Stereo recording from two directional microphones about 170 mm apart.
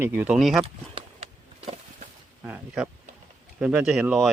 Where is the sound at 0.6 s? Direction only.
35° right (ahead or behind).